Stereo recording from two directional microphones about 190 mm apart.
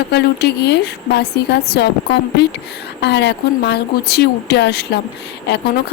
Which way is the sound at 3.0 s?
65° left (ahead or behind).